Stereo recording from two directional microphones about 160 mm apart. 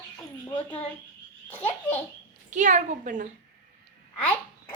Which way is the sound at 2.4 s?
50° right (ahead or behind).